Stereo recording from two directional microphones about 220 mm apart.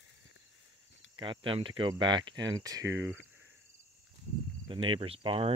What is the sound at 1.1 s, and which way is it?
Speech, 20° right (ahead or behind).